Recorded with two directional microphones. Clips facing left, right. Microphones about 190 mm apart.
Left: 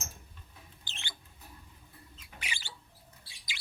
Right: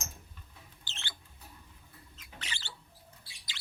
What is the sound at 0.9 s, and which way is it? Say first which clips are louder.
Rodents: right 1 dB; 15° left (ahead or behind).